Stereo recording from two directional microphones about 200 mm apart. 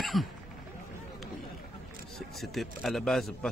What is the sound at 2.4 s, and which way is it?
Speech, centre (ahead or behind).